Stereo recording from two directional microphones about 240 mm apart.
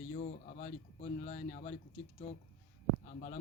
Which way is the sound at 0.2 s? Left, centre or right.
Left.